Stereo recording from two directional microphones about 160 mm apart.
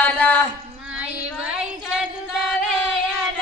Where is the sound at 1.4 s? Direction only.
5° right (ahead or behind).